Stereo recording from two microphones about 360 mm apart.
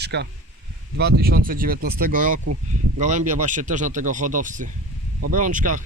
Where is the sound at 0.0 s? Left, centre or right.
Right.